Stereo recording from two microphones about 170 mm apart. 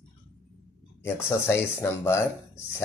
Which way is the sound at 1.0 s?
15° left (ahead or behind).